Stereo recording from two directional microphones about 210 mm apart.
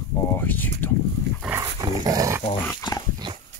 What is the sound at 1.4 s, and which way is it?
Dog, 15° right (ahead or behind).